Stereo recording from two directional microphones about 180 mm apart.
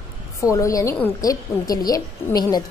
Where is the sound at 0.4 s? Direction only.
15° left (ahead or behind).